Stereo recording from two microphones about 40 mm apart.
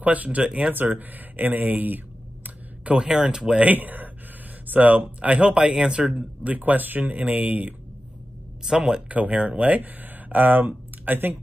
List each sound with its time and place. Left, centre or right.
0.0 s speech: right
0.7 s speech: right
2.4 s a sound: right
3.0 s speech: right
3.7 s speech: right; by 6.2 s centre
6.4 s speech: right
8.6 s speech: centre
9.1 s speech: right